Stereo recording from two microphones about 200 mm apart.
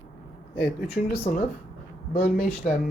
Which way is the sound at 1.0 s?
45° left (ahead or behind).